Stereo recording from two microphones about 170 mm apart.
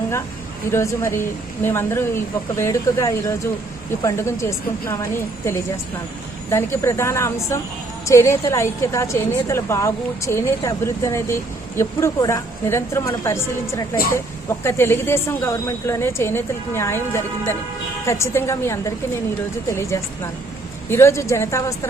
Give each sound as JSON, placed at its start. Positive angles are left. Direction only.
{"t": 0.7, "sound": "a woman's voice", "side_deg": 15}
{"t": 13.9, "sound": "speech", "side_deg": 60}
{"t": 14.6, "sound": "a woman's voice", "side_deg": 15}
{"t": 18.0, "sound": "a woman's voice", "side_deg": 15}